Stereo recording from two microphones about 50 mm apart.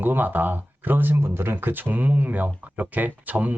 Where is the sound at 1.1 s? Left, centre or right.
Right.